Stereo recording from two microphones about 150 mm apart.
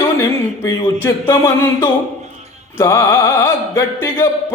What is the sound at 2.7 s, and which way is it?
Music, 20° left (ahead or behind).